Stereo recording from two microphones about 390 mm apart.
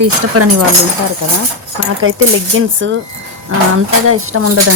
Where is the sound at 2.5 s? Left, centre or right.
Right.